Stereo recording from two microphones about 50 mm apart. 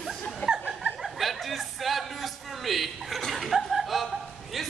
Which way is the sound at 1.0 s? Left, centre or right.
Centre.